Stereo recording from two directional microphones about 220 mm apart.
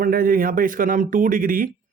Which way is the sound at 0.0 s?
40° right (ahead or behind).